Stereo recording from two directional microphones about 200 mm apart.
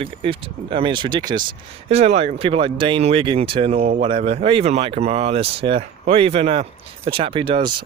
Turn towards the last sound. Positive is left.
turn(degrees=-25)  # may be behind; listen again after turning